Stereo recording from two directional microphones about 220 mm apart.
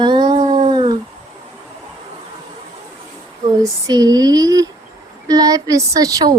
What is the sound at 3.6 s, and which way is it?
Speech, 15° right (ahead or behind).